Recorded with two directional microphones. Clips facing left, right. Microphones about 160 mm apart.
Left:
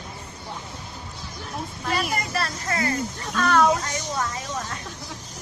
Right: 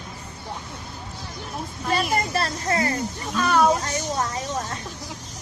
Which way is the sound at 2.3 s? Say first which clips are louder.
Right 3 dB; 30° right (ahead or behind).